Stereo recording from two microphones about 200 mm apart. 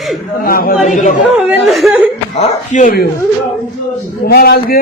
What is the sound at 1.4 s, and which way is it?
Speech, centre (ahead or behind).